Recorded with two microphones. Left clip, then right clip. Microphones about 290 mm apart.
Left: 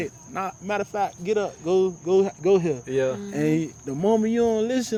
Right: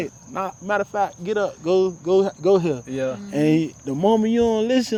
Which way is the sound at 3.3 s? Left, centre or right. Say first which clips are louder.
Right 4 dB; right.